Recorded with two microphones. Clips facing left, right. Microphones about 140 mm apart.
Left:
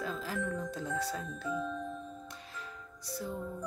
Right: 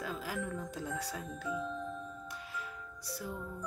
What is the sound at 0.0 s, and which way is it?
Speech, 10° right (ahead or behind).